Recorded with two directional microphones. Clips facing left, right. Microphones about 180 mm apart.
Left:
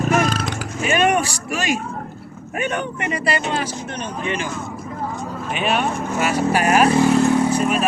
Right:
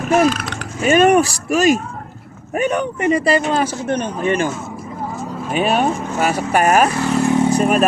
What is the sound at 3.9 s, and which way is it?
Speech, 55° right (ahead or behind).